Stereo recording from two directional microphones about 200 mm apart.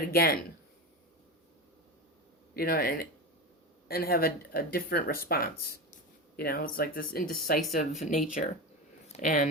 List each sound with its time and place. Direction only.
0.1 s speech: 50° left (ahead or behind)
2.6 s speech: 50° left (ahead or behind)